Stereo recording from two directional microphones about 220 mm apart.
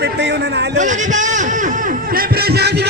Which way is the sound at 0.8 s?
35° right (ahead or behind).